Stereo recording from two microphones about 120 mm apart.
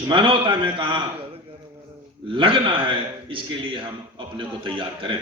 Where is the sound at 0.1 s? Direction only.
45° right (ahead or behind).